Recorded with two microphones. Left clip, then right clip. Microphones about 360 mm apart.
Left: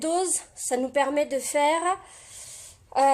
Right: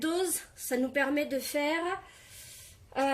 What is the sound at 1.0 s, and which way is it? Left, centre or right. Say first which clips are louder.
Speech: left 7 dB; left.